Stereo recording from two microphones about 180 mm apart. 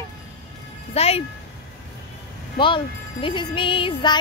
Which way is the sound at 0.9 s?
35° left (ahead or behind).